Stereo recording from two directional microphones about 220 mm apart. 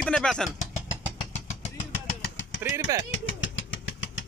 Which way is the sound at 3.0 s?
60° left (ahead or behind).